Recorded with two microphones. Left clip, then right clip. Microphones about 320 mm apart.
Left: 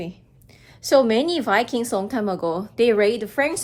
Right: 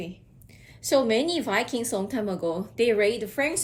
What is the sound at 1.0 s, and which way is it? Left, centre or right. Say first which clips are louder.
A woman's voice: left 4 dB; centre.